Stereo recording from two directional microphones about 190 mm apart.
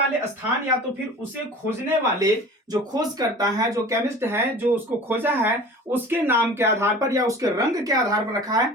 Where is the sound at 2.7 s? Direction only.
20° right (ahead or behind).